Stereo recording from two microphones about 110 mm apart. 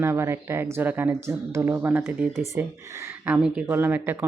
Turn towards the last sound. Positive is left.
turn(degrees=-20)  # may be behind; listen again after turning